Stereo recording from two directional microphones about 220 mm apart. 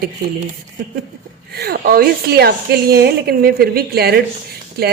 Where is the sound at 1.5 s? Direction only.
45° right (ahead or behind).